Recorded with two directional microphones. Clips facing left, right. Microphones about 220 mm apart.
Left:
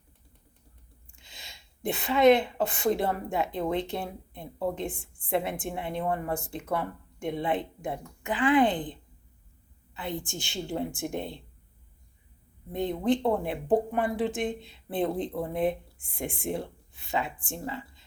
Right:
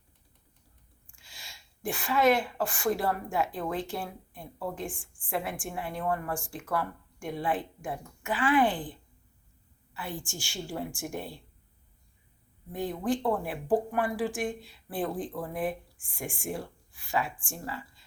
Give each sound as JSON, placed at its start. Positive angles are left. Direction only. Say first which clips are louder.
{"t": 1.1, "sound": "a woman's voice", "louder": "left 2 dB", "side_deg": 20}
{"t": 4.9, "sound": "a woman's voice", "louder": "left 4 dB", "side_deg": 35}
{"t": 5.3, "sound": "speech", "louder": "left 4 dB", "side_deg": 20}
{"t": 12.7, "sound": "speech", "louder": "left 4 dB", "side_deg": 20}